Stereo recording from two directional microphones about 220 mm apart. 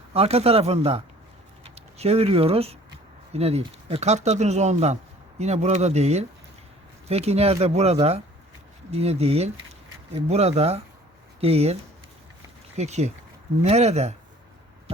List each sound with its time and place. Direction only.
0.1 s speech: 25° right (ahead or behind)